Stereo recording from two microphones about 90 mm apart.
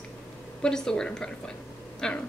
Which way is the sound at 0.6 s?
10° left (ahead or behind).